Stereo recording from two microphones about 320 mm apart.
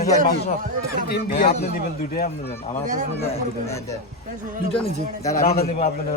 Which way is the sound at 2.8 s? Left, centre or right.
Right.